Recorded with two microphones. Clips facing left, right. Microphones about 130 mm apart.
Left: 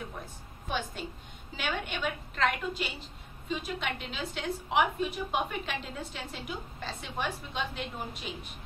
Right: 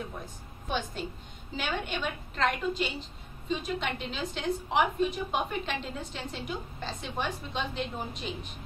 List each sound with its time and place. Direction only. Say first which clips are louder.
0.7 s a woman's voice: right 2 dB; 5° left (ahead or behind)